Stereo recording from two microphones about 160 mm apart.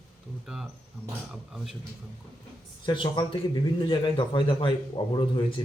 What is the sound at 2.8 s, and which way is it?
A man's voice, 30° left (ahead or behind).